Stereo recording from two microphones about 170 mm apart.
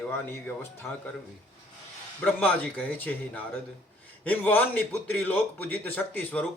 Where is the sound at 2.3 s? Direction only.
10° left (ahead or behind).